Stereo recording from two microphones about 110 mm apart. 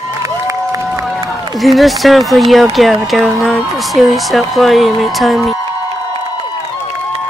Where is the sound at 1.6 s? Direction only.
Centre (ahead or behind).